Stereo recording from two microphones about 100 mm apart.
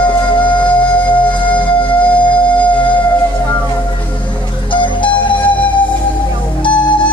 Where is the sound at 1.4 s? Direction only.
60° left (ahead or behind).